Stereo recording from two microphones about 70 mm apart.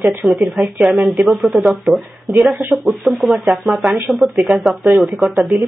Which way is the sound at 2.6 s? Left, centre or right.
Right.